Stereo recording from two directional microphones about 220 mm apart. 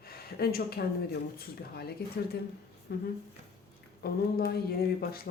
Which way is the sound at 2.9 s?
50° left (ahead or behind).